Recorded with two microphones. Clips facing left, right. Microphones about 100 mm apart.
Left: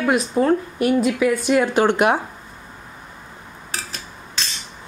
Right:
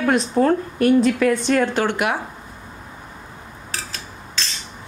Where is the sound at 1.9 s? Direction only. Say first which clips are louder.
Left 5 dB; 25° left (ahead or behind).